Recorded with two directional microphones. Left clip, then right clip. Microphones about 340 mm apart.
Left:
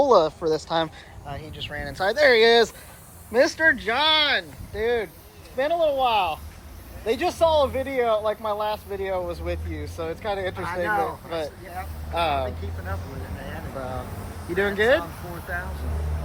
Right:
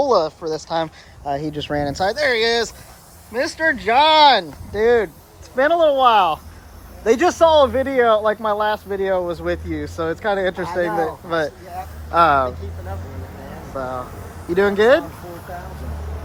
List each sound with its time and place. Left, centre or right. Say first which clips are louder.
0.0 s speech: right 1 dB; centre
4.7 s speech: right 9 dB; right
5.5 s speech: right 7 dB; right
14.5 s speech: right 6 dB; right